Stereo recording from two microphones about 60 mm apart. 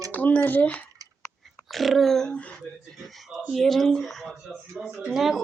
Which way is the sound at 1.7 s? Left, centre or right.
Centre.